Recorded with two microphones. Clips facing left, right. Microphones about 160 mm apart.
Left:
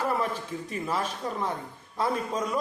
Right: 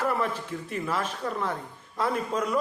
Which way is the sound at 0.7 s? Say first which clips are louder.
Even; 15° left (ahead or behind).